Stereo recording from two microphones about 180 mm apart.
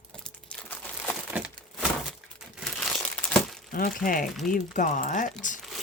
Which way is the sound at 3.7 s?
50° left (ahead or behind).